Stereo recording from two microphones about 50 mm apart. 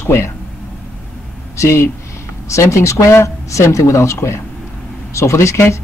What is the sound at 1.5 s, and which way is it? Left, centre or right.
Speech, left.